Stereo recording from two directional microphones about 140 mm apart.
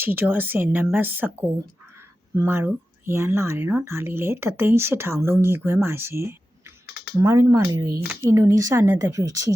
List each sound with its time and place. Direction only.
0.0 s speech: 15° right (ahead or behind)